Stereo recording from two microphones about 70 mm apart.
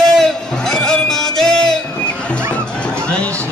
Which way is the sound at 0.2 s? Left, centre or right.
Centre.